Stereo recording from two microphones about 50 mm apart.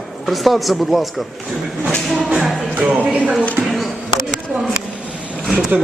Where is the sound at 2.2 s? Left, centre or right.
Centre.